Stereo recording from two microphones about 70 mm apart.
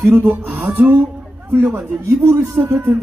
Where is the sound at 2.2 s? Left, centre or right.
Right.